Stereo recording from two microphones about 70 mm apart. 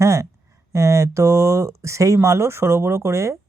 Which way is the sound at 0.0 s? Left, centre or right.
Right.